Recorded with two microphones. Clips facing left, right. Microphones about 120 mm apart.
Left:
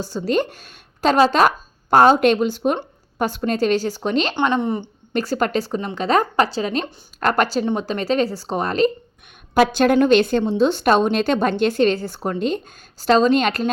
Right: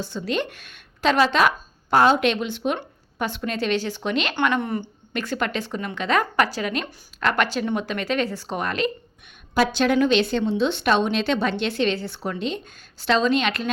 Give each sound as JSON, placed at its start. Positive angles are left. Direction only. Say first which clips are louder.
{"t": 0.0, "sound": "a woman's voice", "louder": "left 5 dB", "side_deg": 40}
{"t": 4.4, "sound": "speech", "louder": "left 3 dB", "side_deg": 25}
{"t": 5.1, "sound": "a woman's voice", "louder": "left 6 dB", "side_deg": 35}
{"t": 9.6, "sound": "a woman's voice", "louder": "left 4 dB", "side_deg": 50}